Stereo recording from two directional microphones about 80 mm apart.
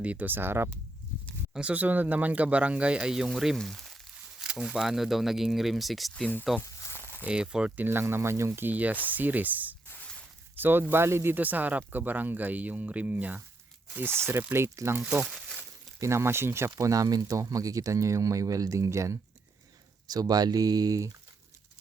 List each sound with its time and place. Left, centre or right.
0.0 s speech: centre
1.5 s speech: centre
4.4 s speech: centre
6.6 s a sound: left
7.3 s speech: centre
7.8 s speech: right
8.6 s speech: right
15.3 s crumpling: centre
16.0 s speech: right
16.8 s speech: right
20.1 s speech: right